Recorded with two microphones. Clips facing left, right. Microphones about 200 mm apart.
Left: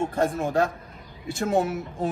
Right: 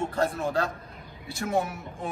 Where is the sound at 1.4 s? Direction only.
30° left (ahead or behind).